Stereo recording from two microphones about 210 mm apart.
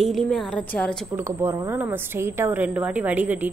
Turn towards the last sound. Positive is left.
turn(degrees=-5)  # may be behind; listen again after turning